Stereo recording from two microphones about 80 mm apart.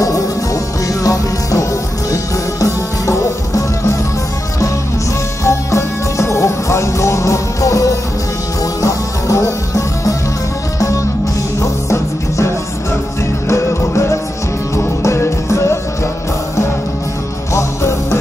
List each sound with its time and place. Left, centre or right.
1.0 s music: left
5.4 s music: left
11.6 s music: left